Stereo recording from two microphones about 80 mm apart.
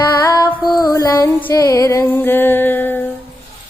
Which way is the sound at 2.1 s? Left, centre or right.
Left.